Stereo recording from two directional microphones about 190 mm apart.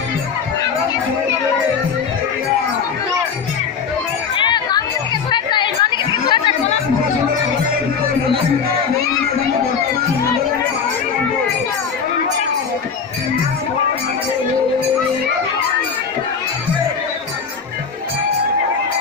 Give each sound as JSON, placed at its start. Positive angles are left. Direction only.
{"t": 4.4, "sound": "chatter", "side_deg": 25}